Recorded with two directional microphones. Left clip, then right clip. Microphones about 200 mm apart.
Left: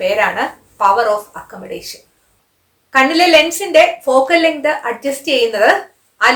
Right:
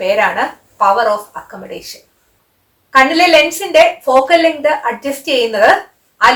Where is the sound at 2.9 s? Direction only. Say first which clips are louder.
Right 1 dB; 20° left (ahead or behind).